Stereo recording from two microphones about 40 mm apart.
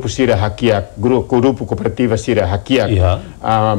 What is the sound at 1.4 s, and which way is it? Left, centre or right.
Speech, right.